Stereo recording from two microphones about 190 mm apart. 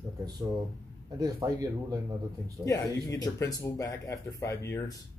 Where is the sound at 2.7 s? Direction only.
20° left (ahead or behind).